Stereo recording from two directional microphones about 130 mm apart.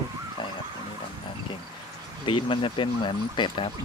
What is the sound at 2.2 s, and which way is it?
Speech, 40° left (ahead or behind).